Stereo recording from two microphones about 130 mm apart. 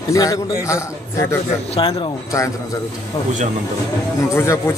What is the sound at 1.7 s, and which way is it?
Speech, 40° left (ahead or behind).